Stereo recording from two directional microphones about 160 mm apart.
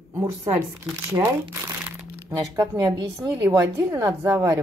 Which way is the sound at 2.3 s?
20° right (ahead or behind).